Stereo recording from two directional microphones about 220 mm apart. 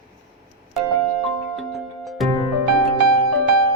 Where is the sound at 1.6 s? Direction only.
Centre (ahead or behind).